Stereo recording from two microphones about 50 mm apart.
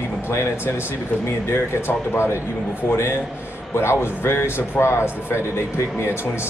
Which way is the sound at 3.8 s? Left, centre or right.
Left.